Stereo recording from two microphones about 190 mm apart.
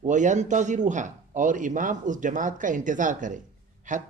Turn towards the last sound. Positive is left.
turn(degrees=-40)  # may be behind; listen again after turning